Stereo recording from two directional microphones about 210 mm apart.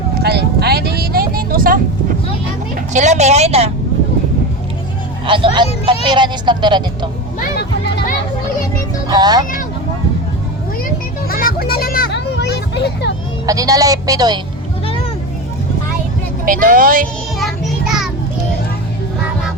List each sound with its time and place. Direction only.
0.1 s vehicle: 50° right (ahead or behind)
2.9 s a woman's voice: 35° right (ahead or behind)
5.2 s speech: 25° right (ahead or behind)
7.6 s children playing: 55° left (ahead or behind)
9.0 s speech: 20° right (ahead or behind)
11.3 s a sound: 45° left (ahead or behind)
13.5 s a woman's voice: 15° right (ahead or behind)
16.5 s speech: 40° right (ahead or behind)